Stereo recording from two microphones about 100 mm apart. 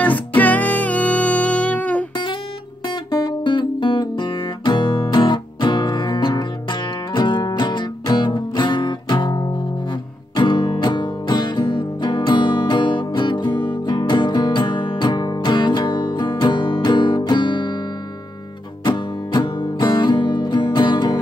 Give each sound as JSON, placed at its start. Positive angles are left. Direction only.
{"t": 0.4, "sound": "music", "side_deg": 15}
{"t": 2.9, "sound": "guitar", "side_deg": 50}
{"t": 5.1, "sound": "music", "side_deg": 50}
{"t": 18.9, "sound": "music", "side_deg": 50}